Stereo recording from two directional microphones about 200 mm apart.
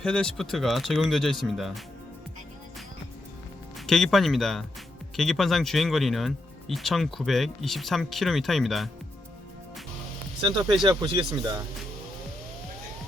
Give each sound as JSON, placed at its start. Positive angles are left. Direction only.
{"t": 0.0, "sound": "speech", "side_deg": 5}
{"t": 3.8, "sound": "speech", "side_deg": 0}
{"t": 10.8, "sound": "speech", "side_deg": -20}